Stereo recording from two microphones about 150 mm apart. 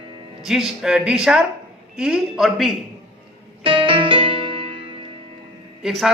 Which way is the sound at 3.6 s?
35° right (ahead or behind).